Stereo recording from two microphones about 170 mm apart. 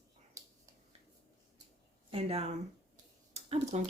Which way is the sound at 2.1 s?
35° right (ahead or behind).